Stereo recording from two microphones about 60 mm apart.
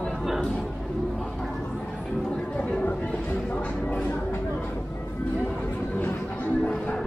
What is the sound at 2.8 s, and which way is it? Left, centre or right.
Train, left.